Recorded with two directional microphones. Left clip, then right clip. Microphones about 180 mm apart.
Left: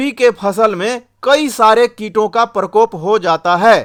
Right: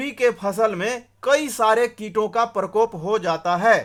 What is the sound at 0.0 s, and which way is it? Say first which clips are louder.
Speech: left 8 dB; 35° left (ahead or behind).